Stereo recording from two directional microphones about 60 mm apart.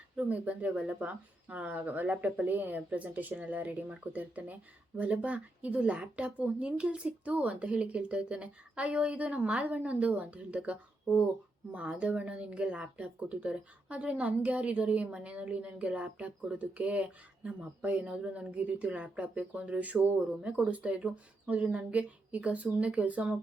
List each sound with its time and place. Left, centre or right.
0.2 s speech: right